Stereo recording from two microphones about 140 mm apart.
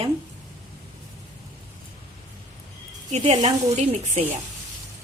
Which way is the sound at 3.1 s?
55° right (ahead or behind).